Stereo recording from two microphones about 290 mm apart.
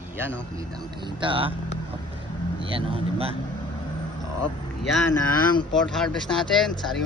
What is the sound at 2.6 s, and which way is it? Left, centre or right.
Speech, centre.